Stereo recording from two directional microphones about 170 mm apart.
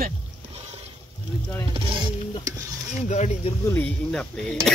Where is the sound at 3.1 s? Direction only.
40° left (ahead or behind).